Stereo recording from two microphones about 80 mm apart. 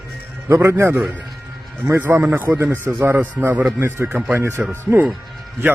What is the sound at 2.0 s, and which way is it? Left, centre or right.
Speech, right.